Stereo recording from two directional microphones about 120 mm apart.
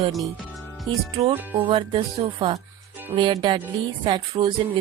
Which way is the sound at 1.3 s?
15° right (ahead or behind).